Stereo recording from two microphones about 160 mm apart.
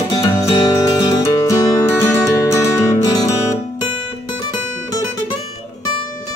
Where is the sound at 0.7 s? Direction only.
25° left (ahead or behind).